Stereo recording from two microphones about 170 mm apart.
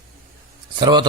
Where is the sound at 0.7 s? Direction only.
25° right (ahead or behind).